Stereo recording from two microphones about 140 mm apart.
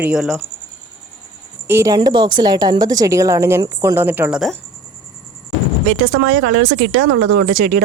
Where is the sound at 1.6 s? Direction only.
20° right (ahead or behind).